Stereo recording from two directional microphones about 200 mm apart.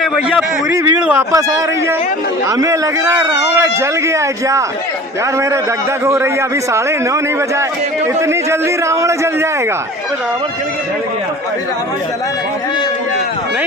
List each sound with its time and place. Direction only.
0.0 s a man's voice: 5° right (ahead or behind)
1.3 s a man's voice: 15° right (ahead or behind)
6.1 s a man's voice: 15° right (ahead or behind)
8.2 s a man's voice: 15° right (ahead or behind)